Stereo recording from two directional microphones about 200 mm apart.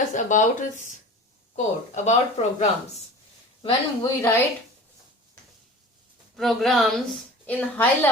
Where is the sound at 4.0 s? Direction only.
10° left (ahead or behind).